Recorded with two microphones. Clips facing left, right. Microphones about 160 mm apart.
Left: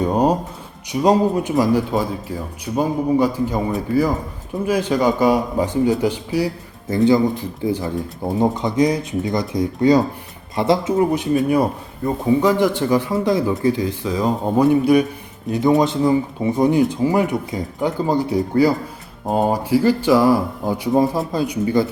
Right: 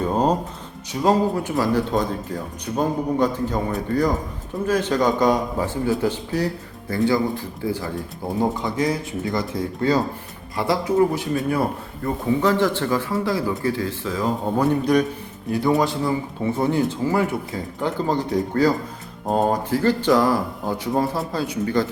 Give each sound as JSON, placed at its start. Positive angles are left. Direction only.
{"t": 0.0, "sound": "speech", "side_deg": 15}
{"t": 15.4, "sound": "speech", "side_deg": 20}